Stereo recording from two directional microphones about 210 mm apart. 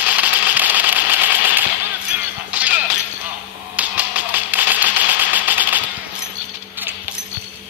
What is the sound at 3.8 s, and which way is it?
Music, 5° right (ahead or behind).